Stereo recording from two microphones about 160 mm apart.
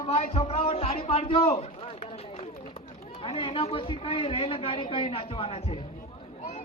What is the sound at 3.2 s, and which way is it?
A man's voice, 35° left (ahead or behind).